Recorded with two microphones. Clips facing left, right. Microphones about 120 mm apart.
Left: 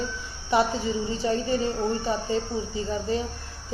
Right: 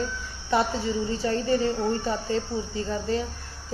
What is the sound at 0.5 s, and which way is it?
A woman's voice, 20° left (ahead or behind).